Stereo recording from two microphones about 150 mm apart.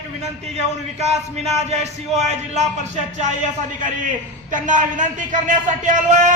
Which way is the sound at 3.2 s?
55° right (ahead or behind).